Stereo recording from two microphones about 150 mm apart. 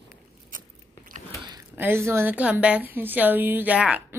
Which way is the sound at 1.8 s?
15° right (ahead or behind).